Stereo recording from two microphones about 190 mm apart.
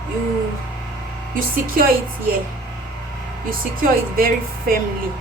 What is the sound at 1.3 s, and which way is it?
Speech, 50° right (ahead or behind).